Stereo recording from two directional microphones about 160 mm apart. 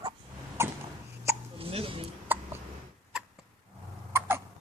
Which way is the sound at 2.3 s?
10° right (ahead or behind).